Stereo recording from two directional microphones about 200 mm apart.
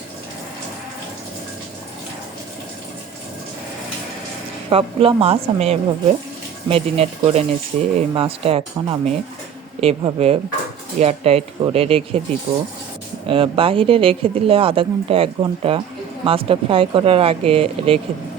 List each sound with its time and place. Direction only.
4.7 s speech: 30° right (ahead or behind)
13.2 s speech: 25° right (ahead or behind)